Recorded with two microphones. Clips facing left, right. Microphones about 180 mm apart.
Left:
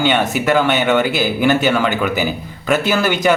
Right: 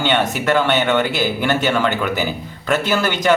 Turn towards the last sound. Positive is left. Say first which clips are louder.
# left 1 dB
turn(degrees=10)  # may be behind; listen again after turning